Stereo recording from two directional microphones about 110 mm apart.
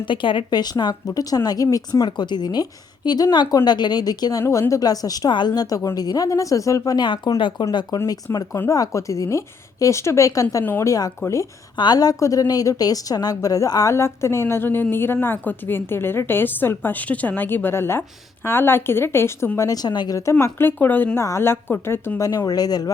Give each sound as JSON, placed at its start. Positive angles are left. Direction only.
{"t": 0.0, "sound": "a woman's voice", "side_deg": 50}
{"t": 2.0, "sound": "a woman's voice", "side_deg": 40}
{"t": 8.5, "sound": "a woman's voice", "side_deg": 25}
{"t": 19.5, "sound": "a woman's voice", "side_deg": 35}
{"t": 20.4, "sound": "a woman's voice", "side_deg": 20}
{"t": 22.4, "sound": "a woman's voice", "side_deg": 35}